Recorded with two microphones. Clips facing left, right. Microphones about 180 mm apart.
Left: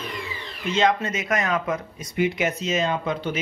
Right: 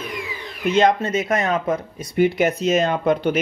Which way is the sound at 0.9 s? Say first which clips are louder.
Right 4 dB; 30° right (ahead or behind).